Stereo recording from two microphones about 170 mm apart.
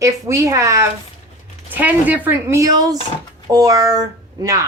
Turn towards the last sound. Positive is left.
turn(degrees=-20)  # may be behind; listen again after turning